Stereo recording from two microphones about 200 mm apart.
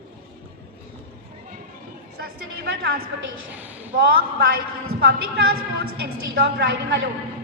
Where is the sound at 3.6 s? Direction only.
10° right (ahead or behind).